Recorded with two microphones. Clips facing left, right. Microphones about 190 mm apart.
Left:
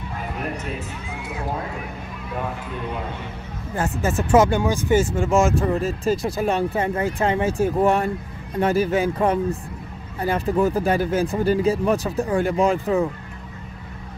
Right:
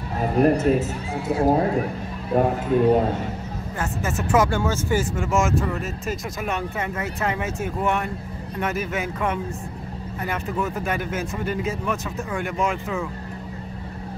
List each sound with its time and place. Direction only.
0.2 s speech: 40° right (ahead or behind)
3.7 s speech: 30° left (ahead or behind)
4.5 s speech: 20° left (ahead or behind)
5.1 s speech: 30° left (ahead or behind)